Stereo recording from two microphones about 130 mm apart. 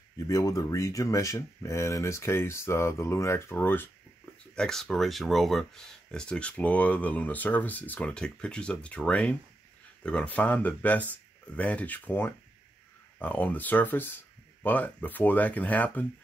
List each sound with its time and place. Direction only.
0.3 s speech: 25° left (ahead or behind)
4.6 s speech: 5° left (ahead or behind)